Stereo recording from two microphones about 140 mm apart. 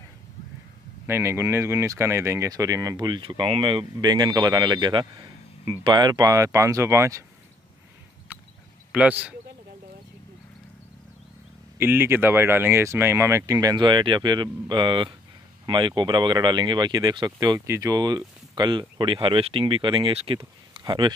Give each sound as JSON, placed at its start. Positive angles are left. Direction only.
{"t": 1.0, "sound": "speech", "side_deg": -20}
{"t": 8.9, "sound": "speech", "side_deg": -10}
{"t": 11.8, "sound": "speech", "side_deg": -15}
{"t": 20.7, "sound": "a sound", "side_deg": -35}